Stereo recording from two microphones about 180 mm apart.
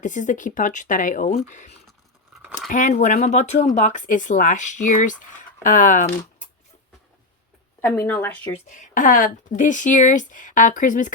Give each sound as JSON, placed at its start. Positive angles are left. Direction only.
{"t": 0.0, "sound": "speech", "side_deg": 45}
{"t": 7.8, "sound": "speech", "side_deg": 10}
{"t": 8.7, "sound": "speech", "side_deg": 45}